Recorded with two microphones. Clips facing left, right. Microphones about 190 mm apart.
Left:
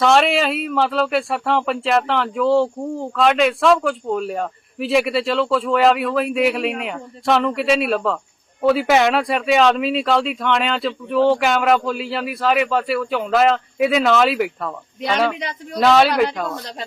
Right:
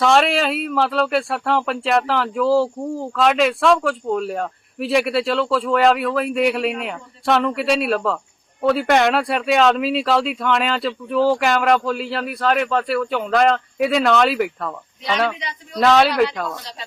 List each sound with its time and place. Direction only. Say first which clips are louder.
0.0 s speech: left 1 dB; centre (ahead or behind)
15.4 s speech: left 4 dB; 50° left (ahead or behind)
15.8 s speech: left 1 dB; centre (ahead or behind)